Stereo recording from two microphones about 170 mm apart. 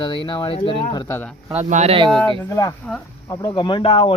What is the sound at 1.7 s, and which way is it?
Speech, 40° right (ahead or behind).